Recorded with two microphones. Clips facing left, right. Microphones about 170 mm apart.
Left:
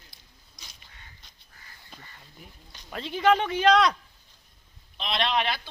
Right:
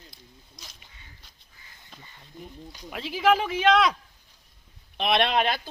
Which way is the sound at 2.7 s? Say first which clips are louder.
Left 1 dB; 5° right (ahead or behind).